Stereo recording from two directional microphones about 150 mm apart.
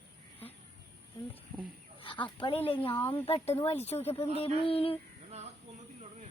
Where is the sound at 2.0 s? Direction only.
35° left (ahead or behind).